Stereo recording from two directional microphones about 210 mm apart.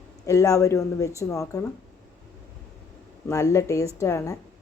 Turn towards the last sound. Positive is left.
turn(degrees=15)  # may be behind; listen again after turning